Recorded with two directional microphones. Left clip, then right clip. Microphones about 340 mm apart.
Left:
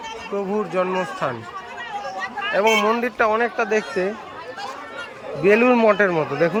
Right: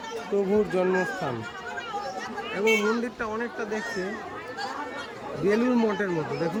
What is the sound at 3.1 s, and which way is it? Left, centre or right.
Speech, centre.